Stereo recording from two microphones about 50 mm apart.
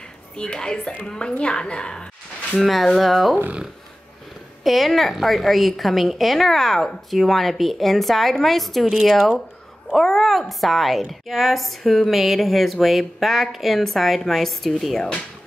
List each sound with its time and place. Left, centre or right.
0.4 s a woman's voice: centre
2.6 s a woman's voice: centre
4.6 s a woman's voice: centre